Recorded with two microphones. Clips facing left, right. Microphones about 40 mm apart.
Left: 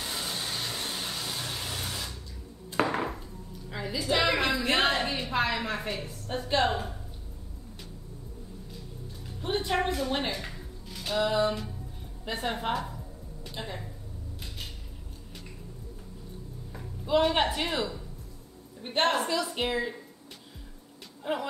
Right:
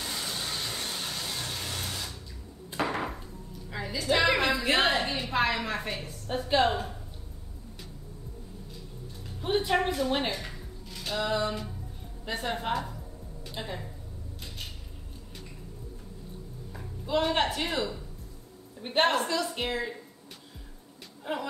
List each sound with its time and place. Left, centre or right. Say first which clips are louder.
0.1 s hair dryer: left 1 dB; centre
2.9 s a sound: left 2 dB; centre
3.7 s a woman's voice: right 1 dB; centre
5.0 s a sound: even; centre
5.3 s a woman's voice: right 2 dB; centre
9.4 s a woman's voice: right 2 dB; centre
10.4 s music: even; centre
12.3 s a woman's voice: even; centre
16.7 s speech: left 3 dB; centre
18.8 s a woman's voice: right 1 dB; centre
19.4 s speech: left 1 dB; centre
21.2 s speech: left 2 dB; centre